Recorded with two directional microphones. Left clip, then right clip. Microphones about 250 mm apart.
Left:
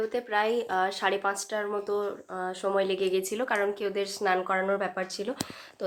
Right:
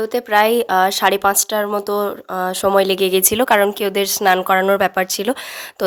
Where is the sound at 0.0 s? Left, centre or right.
Right.